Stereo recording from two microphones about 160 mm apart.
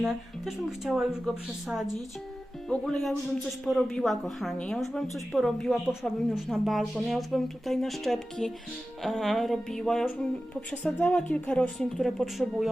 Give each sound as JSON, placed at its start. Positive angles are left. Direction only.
{"t": 0.0, "sound": "a woman's voice", "side_deg": 0}